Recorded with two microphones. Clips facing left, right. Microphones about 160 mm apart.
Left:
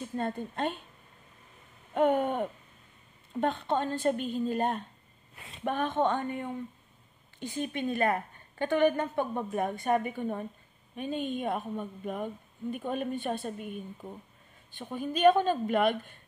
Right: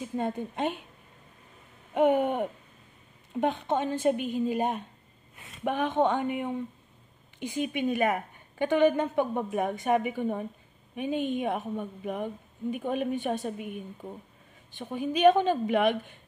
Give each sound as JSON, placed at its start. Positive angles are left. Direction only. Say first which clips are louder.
{"t": 0.0, "sound": "a woman's voice", "louder": "right 2 dB", "side_deg": -15}
{"t": 2.0, "sound": "a woman's voice", "louder": "right 2 dB", "side_deg": -15}